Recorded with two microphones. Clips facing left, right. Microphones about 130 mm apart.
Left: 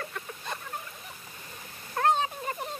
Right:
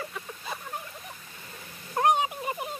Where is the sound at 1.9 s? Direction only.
15° right (ahead or behind).